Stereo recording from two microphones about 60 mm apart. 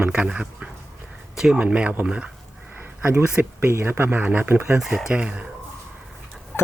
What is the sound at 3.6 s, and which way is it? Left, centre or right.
Speech, right.